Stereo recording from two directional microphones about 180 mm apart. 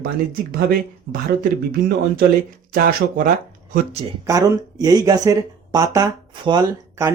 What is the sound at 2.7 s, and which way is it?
Speech, 55° right (ahead or behind).